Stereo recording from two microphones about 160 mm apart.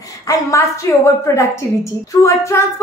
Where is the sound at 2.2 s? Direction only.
15° left (ahead or behind).